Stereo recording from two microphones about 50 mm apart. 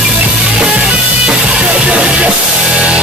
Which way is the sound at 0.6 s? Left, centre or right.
Right.